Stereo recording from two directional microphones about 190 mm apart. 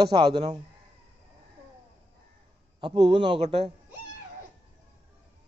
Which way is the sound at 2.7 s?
25° right (ahead or behind).